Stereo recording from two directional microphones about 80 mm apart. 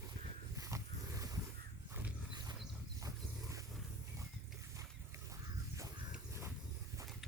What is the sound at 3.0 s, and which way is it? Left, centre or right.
Zipper, right.